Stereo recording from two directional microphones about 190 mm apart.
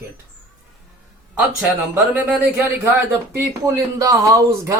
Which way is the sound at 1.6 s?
5° right (ahead or behind).